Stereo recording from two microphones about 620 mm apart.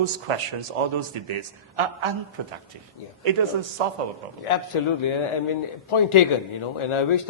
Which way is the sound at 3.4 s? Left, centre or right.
Right.